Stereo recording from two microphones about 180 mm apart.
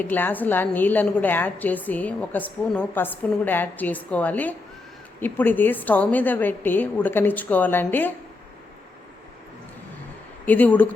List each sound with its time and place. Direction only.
0.0 s a woman's voice: 10° left (ahead or behind)
10.4 s a woman's voice: 10° left (ahead or behind)